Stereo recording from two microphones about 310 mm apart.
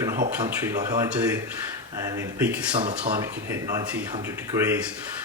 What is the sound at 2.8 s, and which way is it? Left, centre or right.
Speech, centre.